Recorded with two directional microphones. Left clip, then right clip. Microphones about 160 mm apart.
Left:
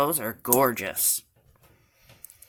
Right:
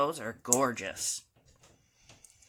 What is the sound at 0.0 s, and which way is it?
Speech, 45° left (ahead or behind).